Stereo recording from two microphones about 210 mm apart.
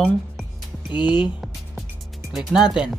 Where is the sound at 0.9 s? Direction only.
20° left (ahead or behind).